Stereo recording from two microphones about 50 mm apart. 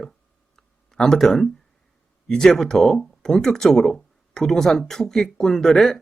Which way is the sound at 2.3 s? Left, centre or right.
Centre.